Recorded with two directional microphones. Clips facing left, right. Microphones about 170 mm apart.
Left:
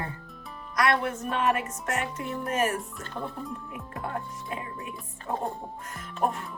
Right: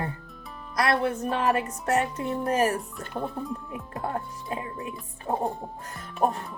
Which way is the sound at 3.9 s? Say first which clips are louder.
Right 3 dB; 25° right (ahead or behind).